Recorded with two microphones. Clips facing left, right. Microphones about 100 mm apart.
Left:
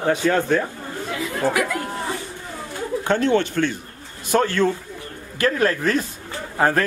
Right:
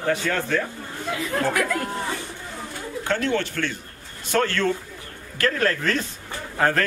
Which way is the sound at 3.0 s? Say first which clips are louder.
Left 5 dB; 20° left (ahead or behind).